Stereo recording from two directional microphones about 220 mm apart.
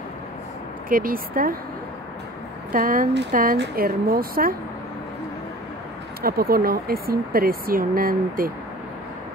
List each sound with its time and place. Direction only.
0.8 s speech: 40° right (ahead or behind)
2.7 s speech: 40° right (ahead or behind)
6.2 s speech: 45° right (ahead or behind)